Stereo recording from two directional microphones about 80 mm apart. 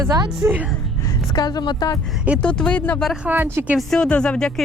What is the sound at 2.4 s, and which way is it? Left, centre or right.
Speech, centre.